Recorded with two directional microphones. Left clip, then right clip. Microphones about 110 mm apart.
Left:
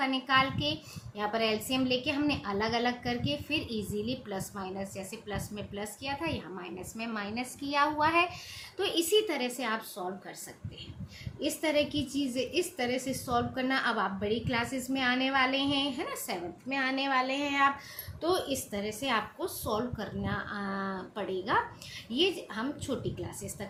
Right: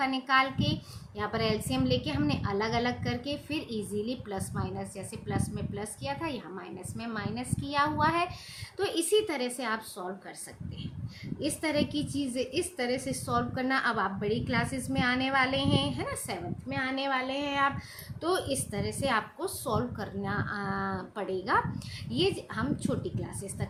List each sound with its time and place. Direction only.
0.0 s a child's voice: 35° right (ahead or behind)
6.9 s a woman's voice: 15° right (ahead or behind)
8.8 s a child's voice: 35° right (ahead or behind)
11.3 s a child's voice: 35° right (ahead or behind)
16.6 s speech: 15° right (ahead or behind)
18.2 s a woman's voice: 50° right (ahead or behind)